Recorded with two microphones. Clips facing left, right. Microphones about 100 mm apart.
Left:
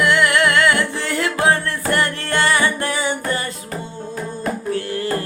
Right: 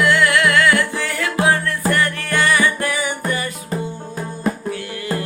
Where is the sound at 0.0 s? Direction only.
20° left (ahead or behind).